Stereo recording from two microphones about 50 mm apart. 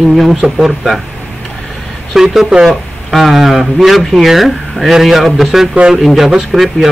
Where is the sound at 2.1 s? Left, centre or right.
Centre.